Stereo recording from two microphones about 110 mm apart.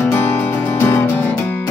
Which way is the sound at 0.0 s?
20° left (ahead or behind).